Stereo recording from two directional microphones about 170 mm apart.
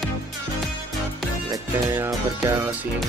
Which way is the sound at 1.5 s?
20° right (ahead or behind).